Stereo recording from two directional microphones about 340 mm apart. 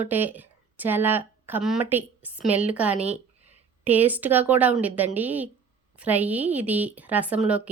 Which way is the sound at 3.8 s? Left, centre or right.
Centre.